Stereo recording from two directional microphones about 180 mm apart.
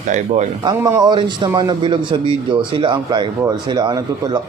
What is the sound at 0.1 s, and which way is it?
Speech, 45° right (ahead or behind).